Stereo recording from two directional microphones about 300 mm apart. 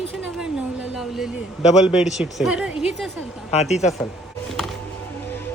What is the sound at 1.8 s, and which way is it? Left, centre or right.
Speech, centre.